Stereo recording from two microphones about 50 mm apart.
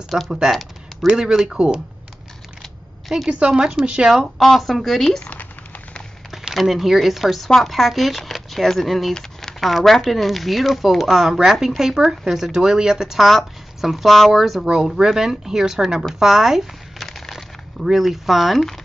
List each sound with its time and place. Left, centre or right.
0.3 s speech: centre
3.3 s speech: right
4.4 s speech: centre
5.2 s a sound: left
6.5 s speech: centre
13.2 s speech: centre
17.0 s crumpling: centre
17.8 s speech: centre